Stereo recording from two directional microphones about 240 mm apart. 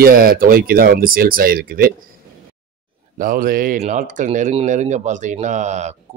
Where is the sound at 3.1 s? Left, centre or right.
Right.